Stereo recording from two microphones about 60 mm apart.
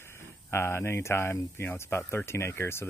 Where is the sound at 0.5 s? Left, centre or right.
Left.